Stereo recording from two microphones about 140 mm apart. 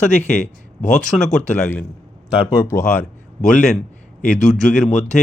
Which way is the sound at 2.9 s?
5° left (ahead or behind).